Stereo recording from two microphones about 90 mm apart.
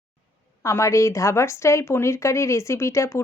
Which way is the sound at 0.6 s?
35° left (ahead or behind).